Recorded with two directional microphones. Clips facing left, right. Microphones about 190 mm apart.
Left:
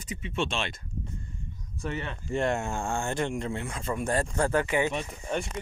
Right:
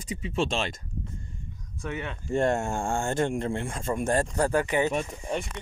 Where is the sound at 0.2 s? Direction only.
35° right (ahead or behind).